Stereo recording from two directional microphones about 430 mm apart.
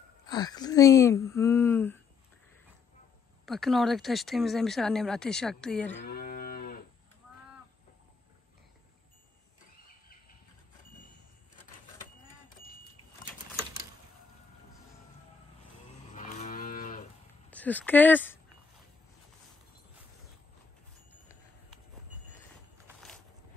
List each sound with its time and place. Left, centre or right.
0.3 s speech: centre
3.4 s speech: centre
5.9 s cattle: left
16.1 s moo: centre
17.5 s speech: centre